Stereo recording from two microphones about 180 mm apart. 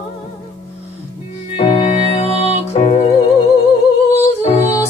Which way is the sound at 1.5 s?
35° left (ahead or behind).